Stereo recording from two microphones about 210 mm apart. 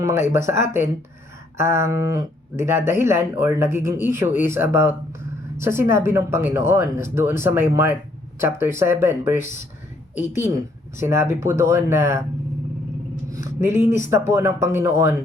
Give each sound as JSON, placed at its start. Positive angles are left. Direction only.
{"t": 0.0, "sound": "speech", "side_deg": -15}
{"t": 13.3, "sound": "speech", "side_deg": -15}